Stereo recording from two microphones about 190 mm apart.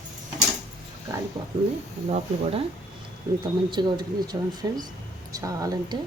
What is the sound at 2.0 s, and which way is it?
Speech, 30° right (ahead or behind).